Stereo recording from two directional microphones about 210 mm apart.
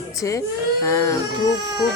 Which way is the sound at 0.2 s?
15° left (ahead or behind).